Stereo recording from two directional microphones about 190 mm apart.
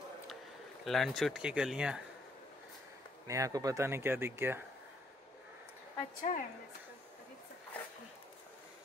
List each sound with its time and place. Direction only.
0.8 s speech: centre (ahead or behind)
3.3 s speech: 15° right (ahead or behind)
6.3 s a woman's voice: 40° left (ahead or behind)